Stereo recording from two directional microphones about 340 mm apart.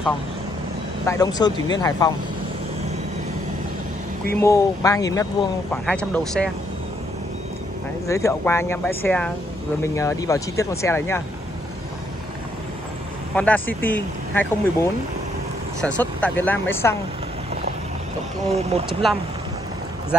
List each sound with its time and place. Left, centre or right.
1.0 s speech: centre
4.4 s speech: centre
8.1 s speech: centre
13.3 s speech: centre
18.5 s speech: centre